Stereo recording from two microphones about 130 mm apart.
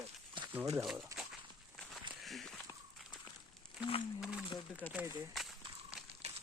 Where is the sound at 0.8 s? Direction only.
5° right (ahead or behind).